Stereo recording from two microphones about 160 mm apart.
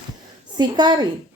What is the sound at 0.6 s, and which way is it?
Speech, 25° right (ahead or behind).